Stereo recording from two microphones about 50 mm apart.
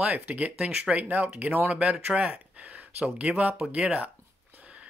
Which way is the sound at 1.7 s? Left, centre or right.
Right.